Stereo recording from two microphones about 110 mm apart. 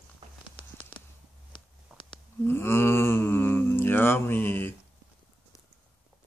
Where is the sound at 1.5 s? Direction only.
50° left (ahead or behind).